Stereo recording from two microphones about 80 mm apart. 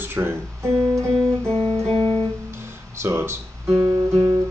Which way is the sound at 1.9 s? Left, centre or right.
Left.